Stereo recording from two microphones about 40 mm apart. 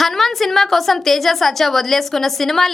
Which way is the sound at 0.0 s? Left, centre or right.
Centre.